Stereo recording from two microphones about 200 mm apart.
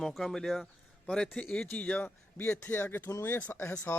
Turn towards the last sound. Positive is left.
turn(degrees=10)  # may be behind; listen again after turning